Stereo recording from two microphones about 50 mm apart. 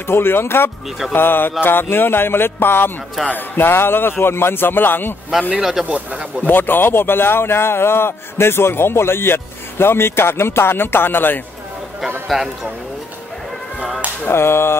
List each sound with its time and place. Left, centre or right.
0.0 s a man's voice: left
5.5 s speech: centre
5.9 s speech: right
6.4 s a man's voice: left
12.3 s speech: centre
14.3 s a sound: left